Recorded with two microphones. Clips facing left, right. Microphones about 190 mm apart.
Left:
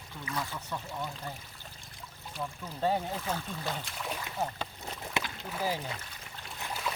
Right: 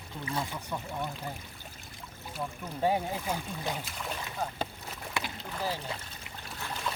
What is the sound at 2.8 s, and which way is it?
Speech, 10° right (ahead or behind).